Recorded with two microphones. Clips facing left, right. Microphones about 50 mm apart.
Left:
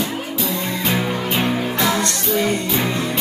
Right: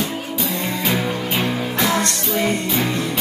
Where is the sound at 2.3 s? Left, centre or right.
Right.